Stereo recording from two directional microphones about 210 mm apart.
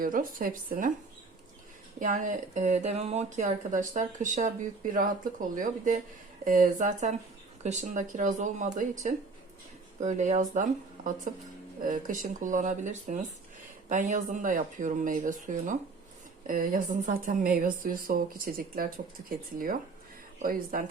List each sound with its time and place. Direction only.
0.0 s speech: 40° right (ahead or behind)
2.0 s speech: 35° right (ahead or behind)
20.4 s speech: 40° right (ahead or behind)